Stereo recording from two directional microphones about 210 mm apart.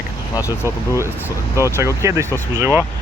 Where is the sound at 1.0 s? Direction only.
10° right (ahead or behind).